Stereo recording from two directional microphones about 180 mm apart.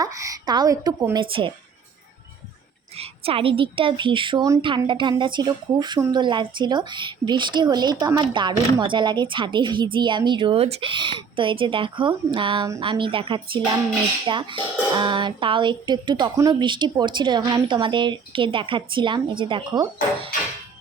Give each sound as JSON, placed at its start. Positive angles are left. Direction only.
{"t": 0.0, "sound": "speech", "side_deg": -20}
{"t": 2.9, "sound": "speech", "side_deg": -35}